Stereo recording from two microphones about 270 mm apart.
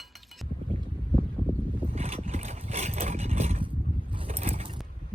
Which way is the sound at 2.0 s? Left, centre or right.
Right.